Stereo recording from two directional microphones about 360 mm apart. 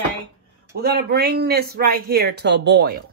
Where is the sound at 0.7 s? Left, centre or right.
Right.